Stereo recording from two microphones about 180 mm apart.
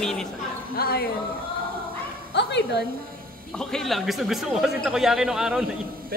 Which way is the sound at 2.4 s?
70° left (ahead or behind).